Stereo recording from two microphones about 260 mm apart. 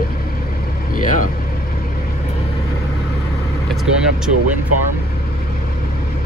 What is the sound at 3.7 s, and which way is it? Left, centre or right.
Speech, centre.